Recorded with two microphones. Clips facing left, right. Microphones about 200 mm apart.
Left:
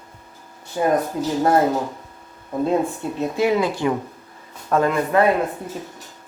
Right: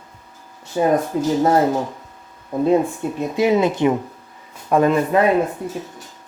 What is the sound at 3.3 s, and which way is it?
A man's voice, 20° right (ahead or behind).